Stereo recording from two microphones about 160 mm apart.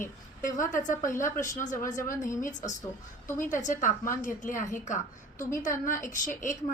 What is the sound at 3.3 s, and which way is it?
A woman's voice, 50° left (ahead or behind).